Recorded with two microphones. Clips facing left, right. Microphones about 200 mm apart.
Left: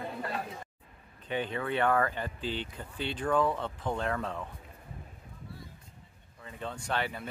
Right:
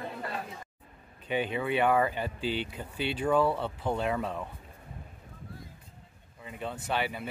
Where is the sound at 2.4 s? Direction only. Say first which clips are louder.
Right 4 dB; 20° left (ahead or behind).